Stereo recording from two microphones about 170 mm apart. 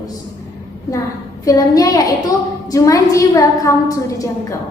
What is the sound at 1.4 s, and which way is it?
A woman's voice, 20° left (ahead or behind).